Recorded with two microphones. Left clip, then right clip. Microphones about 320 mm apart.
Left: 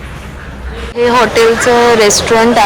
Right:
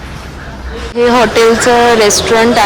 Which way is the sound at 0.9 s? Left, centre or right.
Centre.